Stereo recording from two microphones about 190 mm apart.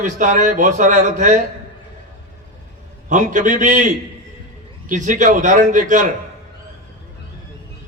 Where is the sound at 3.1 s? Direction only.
40° right (ahead or behind).